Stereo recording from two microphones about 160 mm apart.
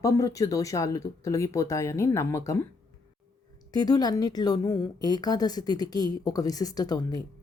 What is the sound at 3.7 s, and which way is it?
A woman's voice, 25° left (ahead or behind).